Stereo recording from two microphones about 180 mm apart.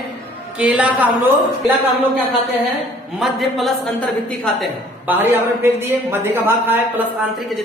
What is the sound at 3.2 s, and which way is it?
Speech, centre (ahead or behind).